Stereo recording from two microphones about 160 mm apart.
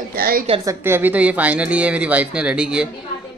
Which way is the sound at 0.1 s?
65° right (ahead or behind).